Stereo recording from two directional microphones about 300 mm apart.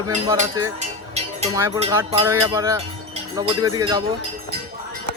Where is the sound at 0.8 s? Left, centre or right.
Right.